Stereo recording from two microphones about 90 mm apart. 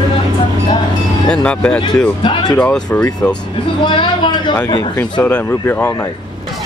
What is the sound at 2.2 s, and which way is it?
Speech, 60° left (ahead or behind).